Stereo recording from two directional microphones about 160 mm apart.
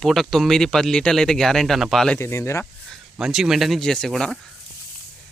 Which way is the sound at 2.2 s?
15° left (ahead or behind).